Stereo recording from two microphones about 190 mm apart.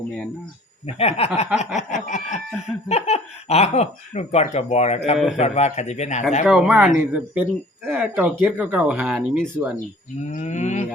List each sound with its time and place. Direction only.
0.9 s speech: 30° left (ahead or behind)
6.4 s speech: 5° right (ahead or behind)
10.2 s speech: 40° left (ahead or behind)